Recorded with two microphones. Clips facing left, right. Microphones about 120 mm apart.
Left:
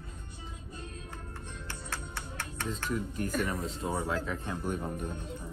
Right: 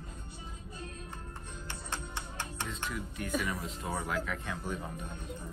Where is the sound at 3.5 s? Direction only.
30° left (ahead or behind).